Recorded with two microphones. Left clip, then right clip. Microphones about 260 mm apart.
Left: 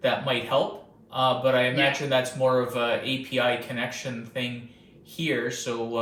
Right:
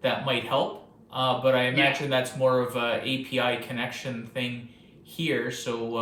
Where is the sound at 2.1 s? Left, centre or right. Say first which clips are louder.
Left 1 dB; centre.